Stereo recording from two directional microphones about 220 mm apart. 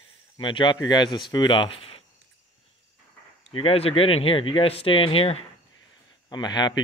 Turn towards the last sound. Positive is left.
turn(degrees=20)  # may be behind; listen again after turning